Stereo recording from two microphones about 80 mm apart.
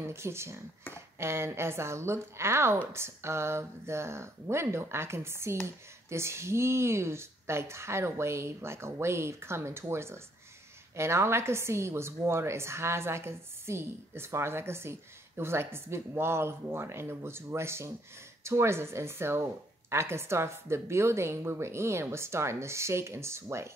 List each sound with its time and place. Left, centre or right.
0.0 s a woman's voice: right